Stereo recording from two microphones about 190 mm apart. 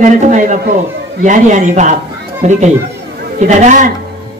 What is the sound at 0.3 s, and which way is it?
Speech, 40° right (ahead or behind).